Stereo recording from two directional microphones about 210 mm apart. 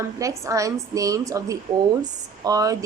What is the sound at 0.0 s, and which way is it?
A woman's voice, 15° right (ahead or behind).